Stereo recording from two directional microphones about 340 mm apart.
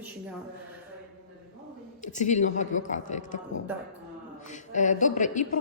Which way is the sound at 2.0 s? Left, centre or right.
Left.